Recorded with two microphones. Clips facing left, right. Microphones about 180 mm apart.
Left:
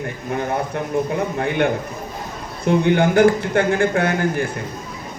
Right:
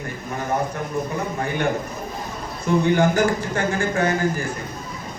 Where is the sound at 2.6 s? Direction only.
60° left (ahead or behind).